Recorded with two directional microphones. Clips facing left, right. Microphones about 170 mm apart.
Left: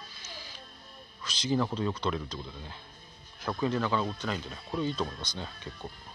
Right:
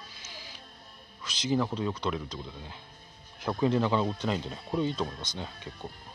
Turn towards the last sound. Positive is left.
turn(degrees=-15)  # may be behind; listen again after turning